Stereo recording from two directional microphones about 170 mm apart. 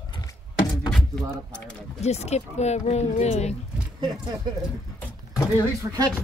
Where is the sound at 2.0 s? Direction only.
40° left (ahead or behind).